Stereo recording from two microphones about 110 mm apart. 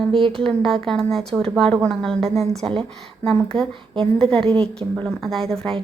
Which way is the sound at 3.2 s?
5° left (ahead or behind).